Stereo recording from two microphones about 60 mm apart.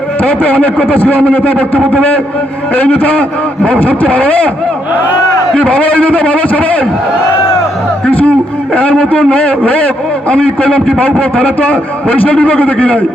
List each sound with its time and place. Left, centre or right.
0.2 s a man's voice: left
5.5 s a man's voice: left
8.0 s a man's voice: left